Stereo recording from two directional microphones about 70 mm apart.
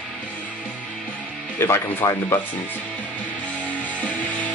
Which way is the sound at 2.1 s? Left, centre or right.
Left.